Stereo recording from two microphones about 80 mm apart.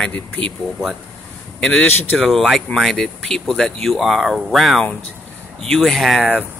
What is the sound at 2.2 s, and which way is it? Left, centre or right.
Speech, centre.